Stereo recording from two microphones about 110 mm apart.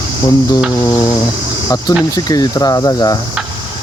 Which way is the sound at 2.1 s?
35° left (ahead or behind).